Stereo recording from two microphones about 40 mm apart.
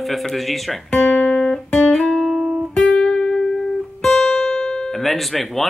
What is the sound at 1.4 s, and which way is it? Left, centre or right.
Music, left.